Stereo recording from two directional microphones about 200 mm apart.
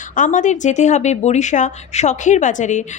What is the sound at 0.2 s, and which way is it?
A woman's voice, 40° left (ahead or behind).